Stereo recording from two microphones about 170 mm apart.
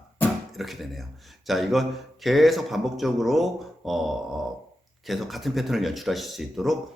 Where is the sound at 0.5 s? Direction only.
Centre (ahead or behind).